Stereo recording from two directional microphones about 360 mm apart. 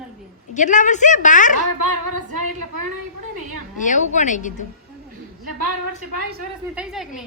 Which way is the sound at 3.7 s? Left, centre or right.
Left.